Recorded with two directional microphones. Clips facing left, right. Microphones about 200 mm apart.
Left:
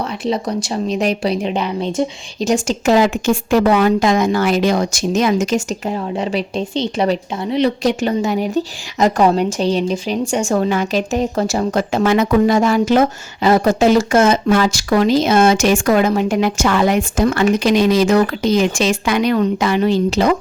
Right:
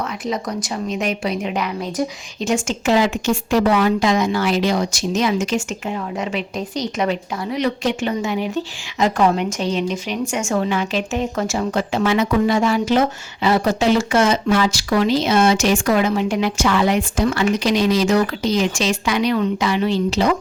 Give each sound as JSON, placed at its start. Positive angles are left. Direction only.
{"t": 0.3, "sound": "a woman's voice", "side_deg": 30}
{"t": 2.4, "sound": "speech", "side_deg": 40}